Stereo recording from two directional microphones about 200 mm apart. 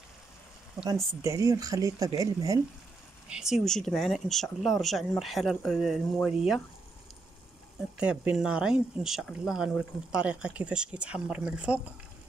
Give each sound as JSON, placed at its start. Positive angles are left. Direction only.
{"t": 1.2, "sound": "speech", "side_deg": -15}
{"t": 3.3, "sound": "speech", "side_deg": -5}
{"t": 8.0, "sound": "speech", "side_deg": -5}